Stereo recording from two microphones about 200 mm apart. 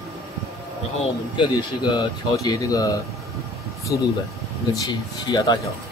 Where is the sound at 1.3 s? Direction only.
20° left (ahead or behind).